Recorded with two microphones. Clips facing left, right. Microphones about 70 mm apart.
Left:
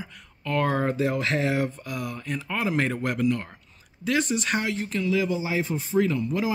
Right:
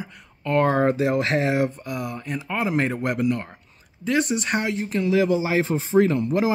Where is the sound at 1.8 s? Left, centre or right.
Right.